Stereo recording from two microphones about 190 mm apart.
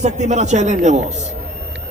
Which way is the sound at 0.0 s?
40° right (ahead or behind).